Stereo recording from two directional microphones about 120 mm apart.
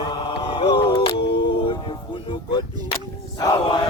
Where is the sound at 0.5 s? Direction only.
45° left (ahead or behind).